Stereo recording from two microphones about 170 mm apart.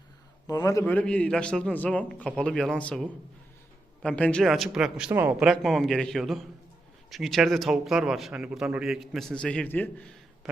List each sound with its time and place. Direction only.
0.4 s a man's voice: 20° left (ahead or behind)
4.0 s a man's voice: 5° left (ahead or behind)
10.4 s a sound: centre (ahead or behind)